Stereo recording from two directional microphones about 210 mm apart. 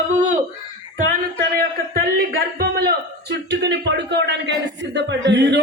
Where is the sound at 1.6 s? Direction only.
45° right (ahead or behind).